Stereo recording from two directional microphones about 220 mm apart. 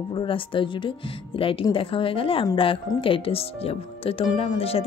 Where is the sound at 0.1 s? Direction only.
25° left (ahead or behind).